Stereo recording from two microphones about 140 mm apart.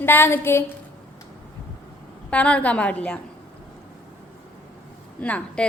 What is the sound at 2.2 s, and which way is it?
Speech, 10° left (ahead or behind).